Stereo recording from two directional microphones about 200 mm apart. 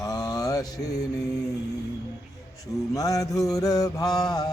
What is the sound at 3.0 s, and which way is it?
Music, 15° left (ahead or behind).